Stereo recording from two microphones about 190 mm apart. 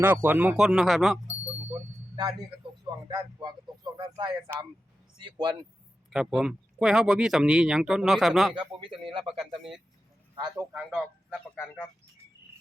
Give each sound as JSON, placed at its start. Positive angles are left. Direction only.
{"t": 0.0, "sound": "speech", "side_deg": -10}
{"t": 1.3, "sound": "a sound", "side_deg": -30}
{"t": 3.1, "sound": "speech", "side_deg": -20}
{"t": 6.1, "sound": "speech", "side_deg": -5}
{"t": 8.5, "sound": "speech", "side_deg": -25}
{"t": 10.3, "sound": "a man's voice", "side_deg": -20}
{"t": 11.5, "sound": "speech", "side_deg": 15}